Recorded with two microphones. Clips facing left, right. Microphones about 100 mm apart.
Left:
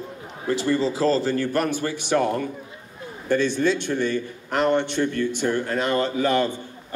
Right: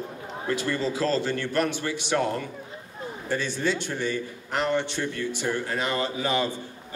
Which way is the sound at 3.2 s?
55° left (ahead or behind).